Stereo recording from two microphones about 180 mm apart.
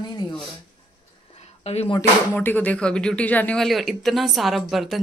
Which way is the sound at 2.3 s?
10° left (ahead or behind).